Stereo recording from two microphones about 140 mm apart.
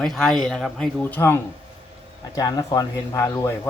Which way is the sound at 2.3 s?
30° left (ahead or behind).